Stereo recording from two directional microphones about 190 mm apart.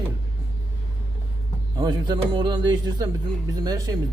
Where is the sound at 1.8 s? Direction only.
20° right (ahead or behind).